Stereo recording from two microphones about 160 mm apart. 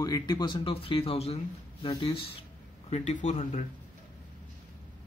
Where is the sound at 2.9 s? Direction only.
45° left (ahead or behind).